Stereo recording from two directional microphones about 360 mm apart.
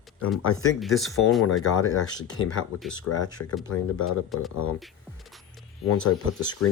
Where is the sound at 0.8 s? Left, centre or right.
Centre.